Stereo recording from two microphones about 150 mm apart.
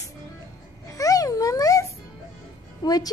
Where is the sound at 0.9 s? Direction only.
25° left (ahead or behind).